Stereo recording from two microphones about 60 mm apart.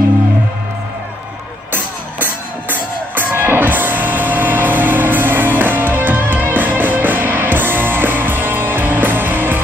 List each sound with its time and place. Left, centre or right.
2.7 s music: right